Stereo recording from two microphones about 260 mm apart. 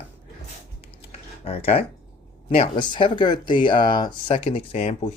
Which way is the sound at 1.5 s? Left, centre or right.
Left.